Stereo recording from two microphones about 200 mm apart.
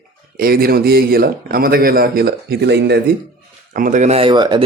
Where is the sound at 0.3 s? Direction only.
45° right (ahead or behind).